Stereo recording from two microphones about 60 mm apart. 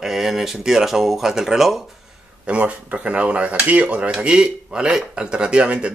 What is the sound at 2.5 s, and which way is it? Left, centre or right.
A man's voice, right.